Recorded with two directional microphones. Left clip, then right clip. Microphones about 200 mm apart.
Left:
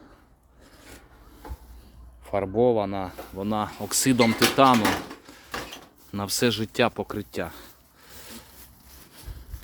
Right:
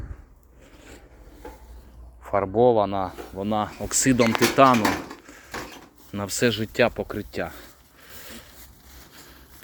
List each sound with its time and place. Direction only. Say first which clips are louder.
0.8 s rub: right 1 dB; 15° left (ahead or behind)
2.2 s a sound: right 3 dB; 10° left (ahead or behind)
2.5 s speech: right 3 dB; 5° left (ahead or behind)